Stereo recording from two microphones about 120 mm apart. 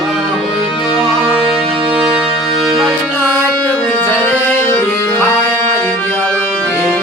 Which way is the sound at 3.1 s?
15° left (ahead or behind).